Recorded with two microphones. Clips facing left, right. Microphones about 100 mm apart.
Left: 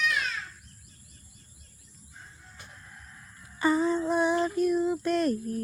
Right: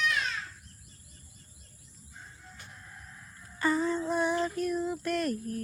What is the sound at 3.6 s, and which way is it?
Female singing, 15° left (ahead or behind).